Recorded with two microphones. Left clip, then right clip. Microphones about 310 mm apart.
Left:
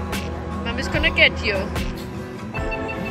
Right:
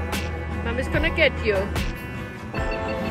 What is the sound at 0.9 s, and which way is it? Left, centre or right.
Speech, centre.